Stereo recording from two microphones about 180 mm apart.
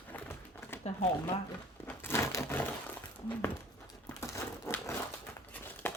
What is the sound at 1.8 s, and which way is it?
Crumpling, 15° left (ahead or behind).